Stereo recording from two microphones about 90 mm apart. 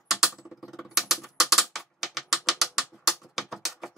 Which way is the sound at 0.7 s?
5° right (ahead or behind).